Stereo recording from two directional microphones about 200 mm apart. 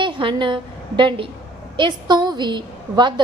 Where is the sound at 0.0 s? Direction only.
25° right (ahead or behind).